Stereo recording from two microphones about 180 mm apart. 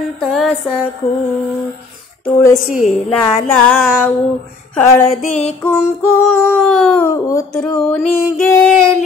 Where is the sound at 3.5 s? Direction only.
5° left (ahead or behind).